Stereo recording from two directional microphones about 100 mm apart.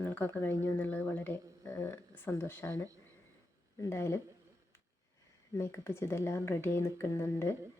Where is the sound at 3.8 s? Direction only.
25° left (ahead or behind).